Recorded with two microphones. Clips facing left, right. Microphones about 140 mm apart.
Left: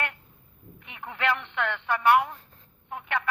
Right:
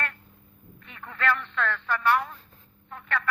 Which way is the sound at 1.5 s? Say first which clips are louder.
Even; 20° left (ahead or behind).